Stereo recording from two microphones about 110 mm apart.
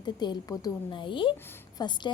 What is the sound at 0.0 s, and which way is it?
A woman's voice, 40° left (ahead or behind).